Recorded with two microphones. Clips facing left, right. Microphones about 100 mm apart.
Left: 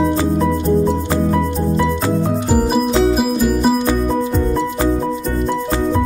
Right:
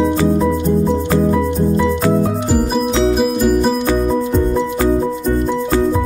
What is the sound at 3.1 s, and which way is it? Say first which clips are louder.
Music: right 2 dB; 5° left (ahead or behind).